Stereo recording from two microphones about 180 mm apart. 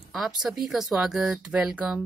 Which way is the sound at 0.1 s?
Centre (ahead or behind).